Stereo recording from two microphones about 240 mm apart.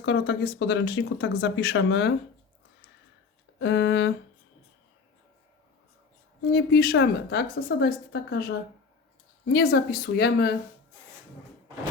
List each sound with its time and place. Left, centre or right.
0.0 s speech: left
3.6 s speech: left
6.5 s a woman's voice: left